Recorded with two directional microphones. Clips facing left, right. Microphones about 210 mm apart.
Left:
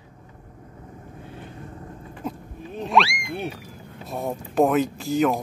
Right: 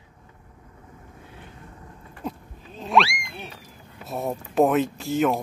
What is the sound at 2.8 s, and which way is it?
Wild animals, centre (ahead or behind).